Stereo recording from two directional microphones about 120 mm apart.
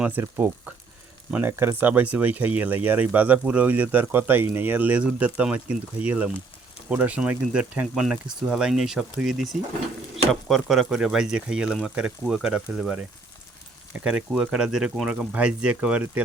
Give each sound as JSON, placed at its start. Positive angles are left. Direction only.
{"t": 0.2, "sound": "speech", "side_deg": -20}